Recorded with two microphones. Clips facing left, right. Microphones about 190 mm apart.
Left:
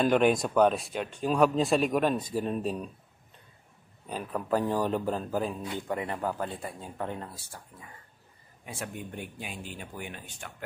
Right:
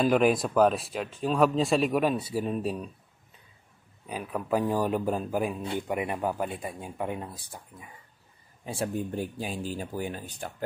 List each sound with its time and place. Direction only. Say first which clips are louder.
0.0 s speech: right 1 dB; 5° right (ahead or behind)
4.1 s speech: right 1 dB; 10° right (ahead or behind)
8.6 s speech: right 8 dB; 35° right (ahead or behind)